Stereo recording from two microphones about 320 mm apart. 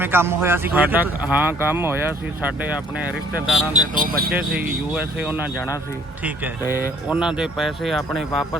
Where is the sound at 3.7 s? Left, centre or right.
Right.